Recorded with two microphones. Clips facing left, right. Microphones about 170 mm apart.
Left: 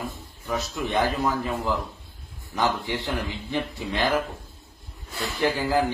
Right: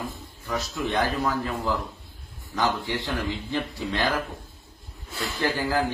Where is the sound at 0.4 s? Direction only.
20° left (ahead or behind).